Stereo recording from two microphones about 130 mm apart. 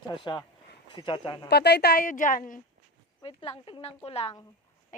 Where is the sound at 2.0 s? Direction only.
90° left.